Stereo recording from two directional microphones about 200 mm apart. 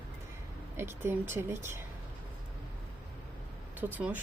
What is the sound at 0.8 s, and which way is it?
A woman's voice, 10° right (ahead or behind).